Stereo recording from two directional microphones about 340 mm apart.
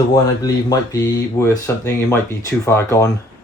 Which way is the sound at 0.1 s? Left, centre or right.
Centre.